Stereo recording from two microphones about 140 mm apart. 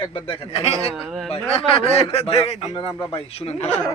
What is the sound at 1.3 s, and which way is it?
A man's voice, 40° left (ahead or behind).